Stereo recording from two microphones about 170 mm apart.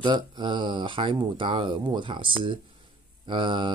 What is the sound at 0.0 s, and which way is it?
Speech, 25° right (ahead or behind).